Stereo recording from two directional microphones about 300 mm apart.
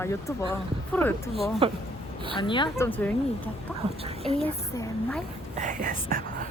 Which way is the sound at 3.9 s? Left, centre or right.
Centre.